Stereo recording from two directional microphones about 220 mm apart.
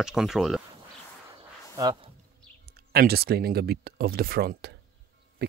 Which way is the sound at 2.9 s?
45° right (ahead or behind).